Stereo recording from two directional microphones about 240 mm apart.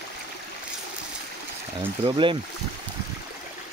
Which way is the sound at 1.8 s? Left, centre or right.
Right.